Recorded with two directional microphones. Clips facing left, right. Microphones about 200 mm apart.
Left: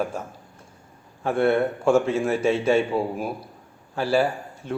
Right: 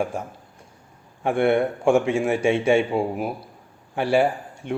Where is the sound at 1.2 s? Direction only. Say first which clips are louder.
Right 1 dB; 15° right (ahead or behind).